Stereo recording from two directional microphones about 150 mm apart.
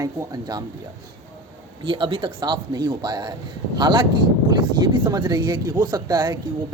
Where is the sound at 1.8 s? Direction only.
35° right (ahead or behind).